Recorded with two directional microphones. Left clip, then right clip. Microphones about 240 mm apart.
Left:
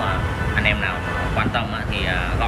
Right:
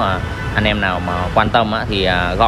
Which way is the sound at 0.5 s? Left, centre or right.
Centre.